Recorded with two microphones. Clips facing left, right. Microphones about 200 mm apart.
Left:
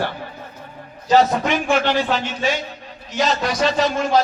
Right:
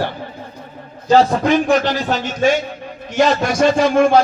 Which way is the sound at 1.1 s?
30° right (ahead or behind).